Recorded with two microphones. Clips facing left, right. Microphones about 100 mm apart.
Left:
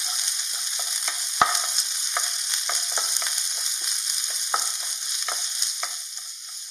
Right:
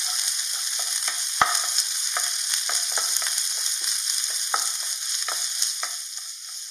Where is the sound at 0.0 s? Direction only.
Centre (ahead or behind).